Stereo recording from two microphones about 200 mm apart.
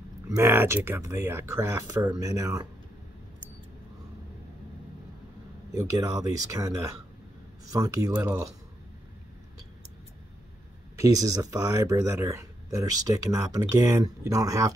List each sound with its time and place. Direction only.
0.3 s speech: 10° right (ahead or behind)
5.8 s speech: 15° right (ahead or behind)
7.7 s speech: 15° right (ahead or behind)
11.0 s speech: 15° right (ahead or behind)